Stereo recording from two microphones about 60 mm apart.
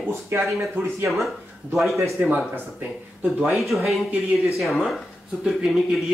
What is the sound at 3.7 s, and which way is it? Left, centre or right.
Speech, centre.